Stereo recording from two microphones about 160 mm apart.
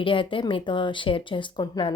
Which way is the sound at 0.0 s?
30° left (ahead or behind).